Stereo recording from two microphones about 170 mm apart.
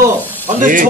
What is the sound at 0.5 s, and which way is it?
Speech, 50° right (ahead or behind).